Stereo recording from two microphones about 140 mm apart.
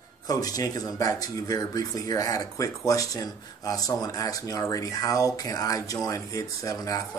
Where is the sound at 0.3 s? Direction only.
25° left (ahead or behind).